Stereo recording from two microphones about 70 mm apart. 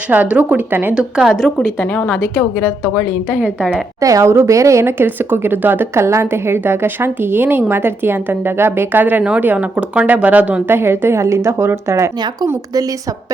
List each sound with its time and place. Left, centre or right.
0.1 s speech: right
0.9 s a woman's voice: centre
2.0 s a woman's voice: left
2.8 s a woman's voice: centre
3.4 s speech: right
4.0 s speech: right; by 10.6 s centre
10.7 s speech: right